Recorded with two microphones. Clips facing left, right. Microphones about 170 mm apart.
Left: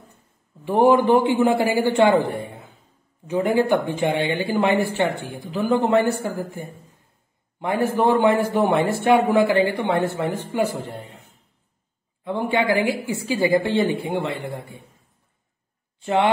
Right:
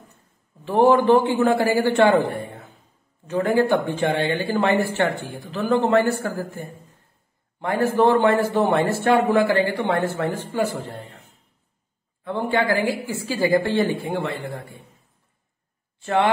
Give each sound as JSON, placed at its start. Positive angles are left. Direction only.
{"t": 0.7, "sound": "a man's voice", "side_deg": 15}
{"t": 12.3, "sound": "a man's voice", "side_deg": 15}